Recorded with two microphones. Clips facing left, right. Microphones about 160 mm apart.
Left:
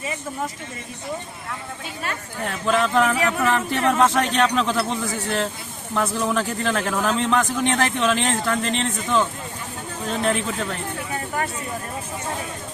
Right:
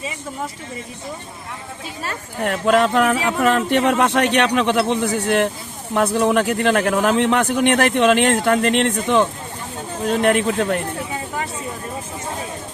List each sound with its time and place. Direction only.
2.4 s speech: 70° right (ahead or behind)